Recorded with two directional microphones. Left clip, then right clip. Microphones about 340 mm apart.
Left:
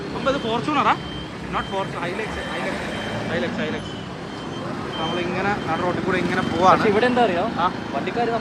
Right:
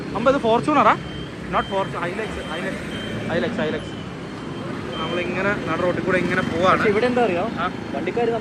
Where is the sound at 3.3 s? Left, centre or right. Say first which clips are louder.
Right 4 dB; centre.